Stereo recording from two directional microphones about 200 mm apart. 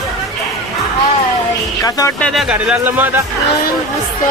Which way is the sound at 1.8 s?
15° left (ahead or behind).